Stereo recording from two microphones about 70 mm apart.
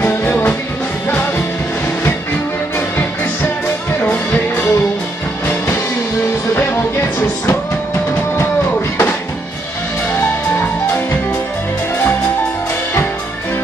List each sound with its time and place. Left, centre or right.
0.0 s music: left
4.0 s music: left
6.5 s music: left